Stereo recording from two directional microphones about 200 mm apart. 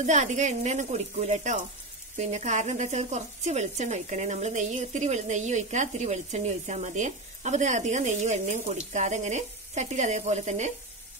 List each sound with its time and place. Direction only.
0.0 s speech: 35° right (ahead or behind)